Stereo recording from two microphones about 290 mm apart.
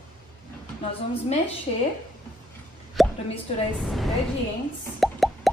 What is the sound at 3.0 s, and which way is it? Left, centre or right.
Plop, centre.